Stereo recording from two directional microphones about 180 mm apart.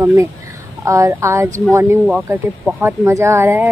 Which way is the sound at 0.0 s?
15° right (ahead or behind).